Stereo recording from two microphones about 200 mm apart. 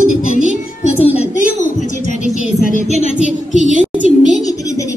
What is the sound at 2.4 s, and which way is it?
Speech, 35° left (ahead or behind).